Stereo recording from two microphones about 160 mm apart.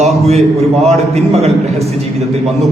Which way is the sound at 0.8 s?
40° right (ahead or behind).